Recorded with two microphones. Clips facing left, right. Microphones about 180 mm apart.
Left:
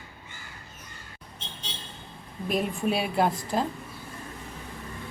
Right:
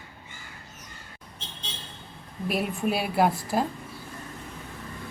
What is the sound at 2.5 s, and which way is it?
A woman's voice, 5° right (ahead or behind).